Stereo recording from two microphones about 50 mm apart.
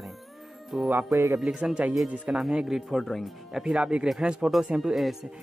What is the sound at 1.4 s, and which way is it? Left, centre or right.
Speech, centre.